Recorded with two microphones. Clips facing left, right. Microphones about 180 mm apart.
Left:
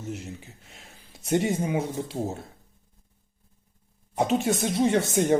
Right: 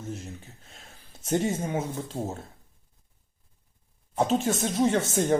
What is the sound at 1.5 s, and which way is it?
Speech, 15° left (ahead or behind).